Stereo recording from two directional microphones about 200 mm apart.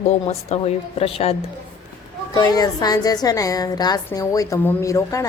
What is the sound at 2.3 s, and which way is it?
A woman's voice, 20° left (ahead or behind).